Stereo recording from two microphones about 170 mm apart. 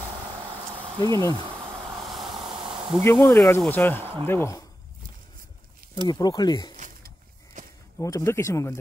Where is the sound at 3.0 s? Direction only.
15° left (ahead or behind).